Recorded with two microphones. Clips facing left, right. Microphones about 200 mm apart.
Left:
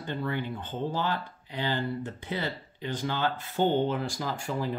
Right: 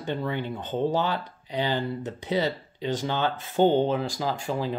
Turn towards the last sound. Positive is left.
turn(degrees=-15)  # may be behind; listen again after turning